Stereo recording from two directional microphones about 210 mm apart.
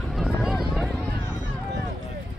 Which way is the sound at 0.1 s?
Centre (ahead or behind).